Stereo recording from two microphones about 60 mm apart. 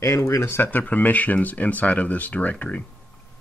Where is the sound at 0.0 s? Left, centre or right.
Left.